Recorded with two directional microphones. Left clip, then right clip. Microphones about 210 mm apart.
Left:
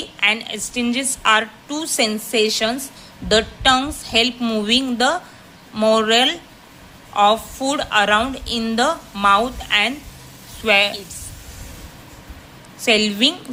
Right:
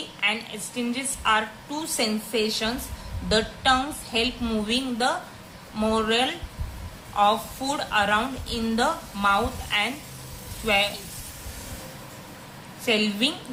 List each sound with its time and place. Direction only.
0.2 s a woman's voice: 40° left (ahead or behind)
12.8 s a woman's voice: 40° left (ahead or behind)